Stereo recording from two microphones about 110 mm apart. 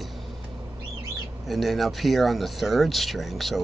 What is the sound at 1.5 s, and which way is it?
Speech, centre (ahead or behind).